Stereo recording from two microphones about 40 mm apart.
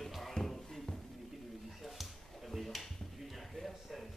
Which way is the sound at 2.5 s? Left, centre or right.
Centre.